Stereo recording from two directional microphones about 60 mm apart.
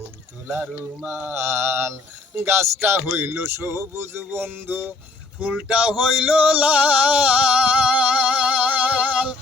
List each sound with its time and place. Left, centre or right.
1.0 s speech: right
1.4 s speech: right
5.6 s a sound: right